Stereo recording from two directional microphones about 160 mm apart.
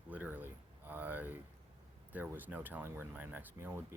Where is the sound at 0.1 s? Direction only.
10° right (ahead or behind).